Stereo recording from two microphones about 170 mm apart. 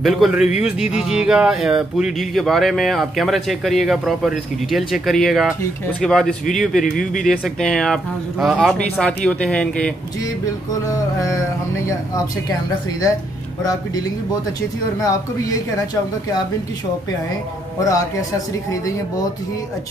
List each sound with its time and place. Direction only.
0.0 s speech: centre (ahead or behind)
10.9 s speech: 20° left (ahead or behind)
17.7 s speech: 20° left (ahead or behind)